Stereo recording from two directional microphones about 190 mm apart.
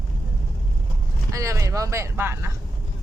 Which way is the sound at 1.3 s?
15° right (ahead or behind).